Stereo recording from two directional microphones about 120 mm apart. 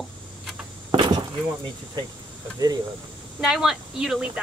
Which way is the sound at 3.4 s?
5° right (ahead or behind).